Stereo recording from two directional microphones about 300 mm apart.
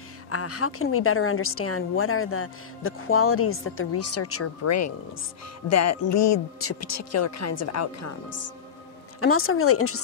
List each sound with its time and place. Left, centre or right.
0.3 s a woman's voice: left
9.2 s a woman's voice: left